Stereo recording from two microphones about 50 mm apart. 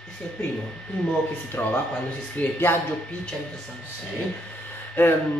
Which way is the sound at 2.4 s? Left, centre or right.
Left.